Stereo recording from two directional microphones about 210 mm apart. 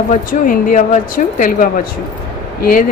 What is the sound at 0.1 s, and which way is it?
Speech, 40° left (ahead or behind).